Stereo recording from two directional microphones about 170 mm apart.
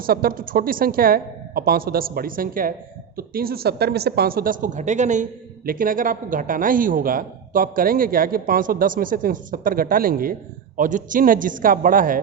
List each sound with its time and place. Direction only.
0.0 s speech: 60° right (ahead or behind)